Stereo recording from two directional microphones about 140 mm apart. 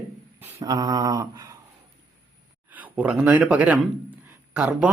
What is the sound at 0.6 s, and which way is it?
Mantra, 25° right (ahead or behind).